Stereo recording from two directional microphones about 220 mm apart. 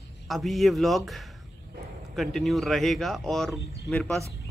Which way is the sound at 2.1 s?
Centre (ahead or behind).